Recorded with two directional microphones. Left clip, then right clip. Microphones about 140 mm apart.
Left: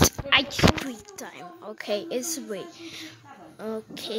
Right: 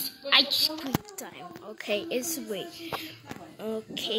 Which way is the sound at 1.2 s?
20° left (ahead or behind).